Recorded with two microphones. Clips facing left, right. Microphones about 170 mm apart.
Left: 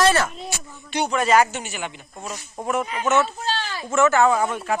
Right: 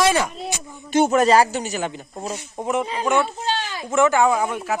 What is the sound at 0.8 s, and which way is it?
Speech, 45° right (ahead or behind).